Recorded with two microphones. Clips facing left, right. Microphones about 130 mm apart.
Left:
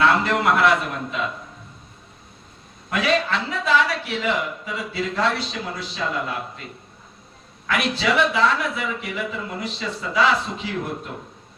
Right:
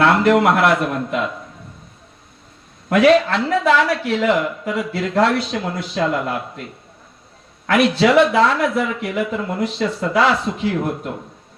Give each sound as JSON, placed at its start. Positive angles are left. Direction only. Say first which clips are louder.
{"t": 0.0, "sound": "a man's voice", "louder": "right 5 dB", "side_deg": -65}
{"t": 2.9, "sound": "speech", "louder": "right 9 dB", "side_deg": -65}
{"t": 7.7, "sound": "speech", "louder": "right 8 dB", "side_deg": -60}